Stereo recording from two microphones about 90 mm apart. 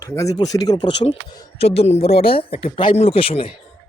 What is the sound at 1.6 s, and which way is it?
Speech, 90° left.